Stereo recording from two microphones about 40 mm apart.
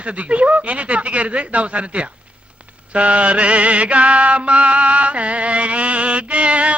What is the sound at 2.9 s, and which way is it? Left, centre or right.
Mantra, right.